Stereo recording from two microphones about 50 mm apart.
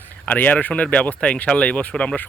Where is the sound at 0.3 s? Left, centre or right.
Left.